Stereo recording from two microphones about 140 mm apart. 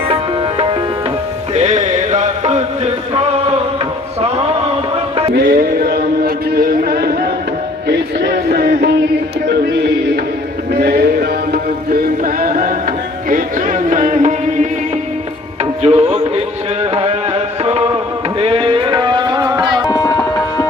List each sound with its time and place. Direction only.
1.5 s music: 55° right (ahead or behind)
5.3 s a sound: 90° right
10.8 s a sound: 90° right
11.9 s music: 90° right
13.3 s music: 65° right (ahead or behind)
15.8 s music: 45° right (ahead or behind)
16.9 s a sound: 45° right (ahead or behind)
18.3 s tabla: 40° right (ahead or behind)
19.9 s tabla: 25° left (ahead or behind)